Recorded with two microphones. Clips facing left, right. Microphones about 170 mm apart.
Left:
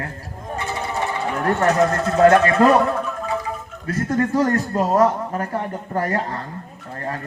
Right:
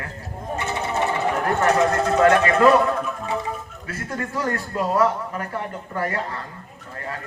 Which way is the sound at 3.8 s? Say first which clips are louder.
Left 10 dB; 40° left (ahead or behind).